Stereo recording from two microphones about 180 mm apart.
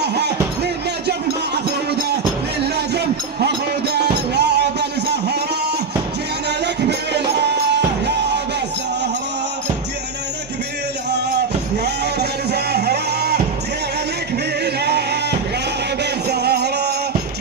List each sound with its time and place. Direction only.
0.0 s music: 70° right (ahead or behind)
4.4 s a sound: 70° right (ahead or behind)
6.6 s music: 70° right (ahead or behind)
11.8 s music: 65° right (ahead or behind)
14.6 s music: 65° right (ahead or behind)